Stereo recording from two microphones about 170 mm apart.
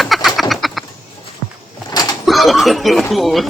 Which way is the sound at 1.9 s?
25° left (ahead or behind).